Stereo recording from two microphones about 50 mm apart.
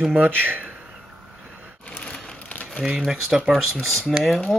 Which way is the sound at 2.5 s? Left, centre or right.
Left.